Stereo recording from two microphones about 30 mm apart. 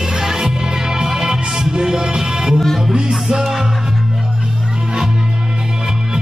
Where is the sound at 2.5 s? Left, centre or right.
Centre.